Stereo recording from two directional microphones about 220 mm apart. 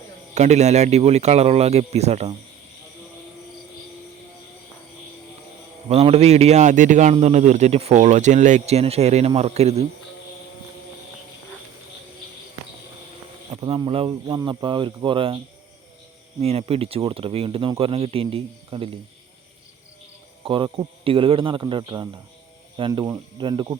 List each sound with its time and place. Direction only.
0.3 s speech: 30° right (ahead or behind)
5.9 s a man's voice: 25° right (ahead or behind)
13.5 s speech: 25° right (ahead or behind)
16.4 s speech: 25° right (ahead or behind)
20.4 s speech: 25° right (ahead or behind)